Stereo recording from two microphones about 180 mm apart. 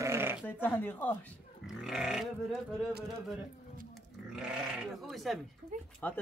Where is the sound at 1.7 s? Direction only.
Centre (ahead or behind).